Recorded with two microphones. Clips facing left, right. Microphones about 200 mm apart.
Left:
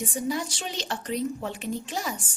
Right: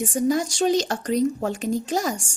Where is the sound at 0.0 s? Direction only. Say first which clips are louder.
Right 7 dB; 45° right (ahead or behind).